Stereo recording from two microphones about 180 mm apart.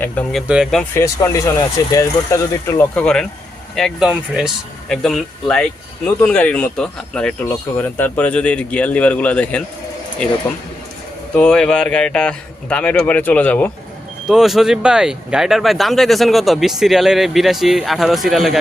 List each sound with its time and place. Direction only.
0.0 s speech: 5° left (ahead or behind)
0.9 s speech: 15° left (ahead or behind)
11.3 s speech: 5° left (ahead or behind)